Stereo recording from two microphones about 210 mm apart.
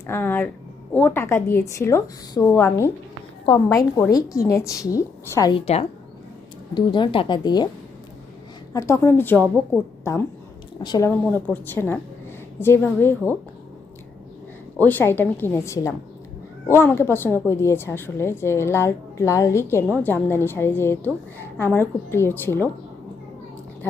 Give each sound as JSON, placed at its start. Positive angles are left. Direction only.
{"t": 0.1, "sound": "a woman's voice", "side_deg": 10}
{"t": 8.7, "sound": "a woman's voice", "side_deg": 15}
{"t": 14.8, "sound": "a woman's voice", "side_deg": 10}